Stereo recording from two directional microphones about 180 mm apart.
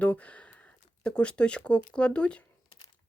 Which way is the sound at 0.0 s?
10° left (ahead or behind).